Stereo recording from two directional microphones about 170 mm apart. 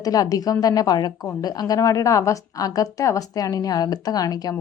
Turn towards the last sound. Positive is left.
turn(degrees=20)  # may be behind; listen again after turning